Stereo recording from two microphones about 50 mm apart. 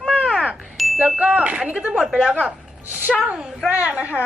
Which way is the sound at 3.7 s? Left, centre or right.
Right.